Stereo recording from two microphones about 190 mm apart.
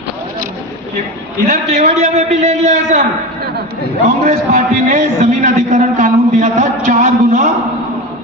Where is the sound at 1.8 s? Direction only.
35° right (ahead or behind).